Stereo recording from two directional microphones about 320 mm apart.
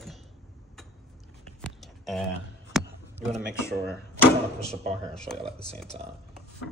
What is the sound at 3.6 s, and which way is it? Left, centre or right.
Speech, centre.